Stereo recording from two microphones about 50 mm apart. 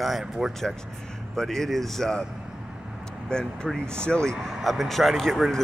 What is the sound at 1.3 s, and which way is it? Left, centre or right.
Speech, centre.